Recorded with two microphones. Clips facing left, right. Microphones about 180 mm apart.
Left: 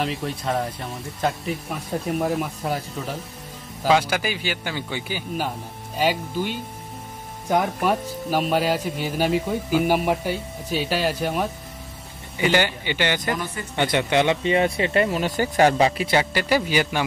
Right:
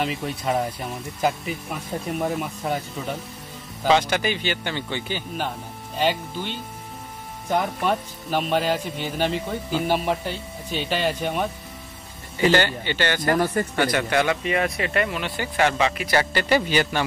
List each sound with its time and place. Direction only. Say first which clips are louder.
0.0 s speech: even; centre (ahead or behind); by 13.3 s 15° left (ahead or behind)
13.3 s speech: right 6 dB; 50° right (ahead or behind)
13.7 s speech: left 3 dB; 20° left (ahead or behind); by 16.1 s 35° left (ahead or behind)
16.1 s speech: even; 10° left (ahead or behind)